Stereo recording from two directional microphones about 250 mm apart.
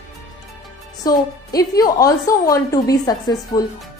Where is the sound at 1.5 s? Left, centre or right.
Centre.